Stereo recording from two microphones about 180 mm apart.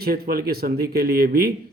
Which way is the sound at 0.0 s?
55° right (ahead or behind).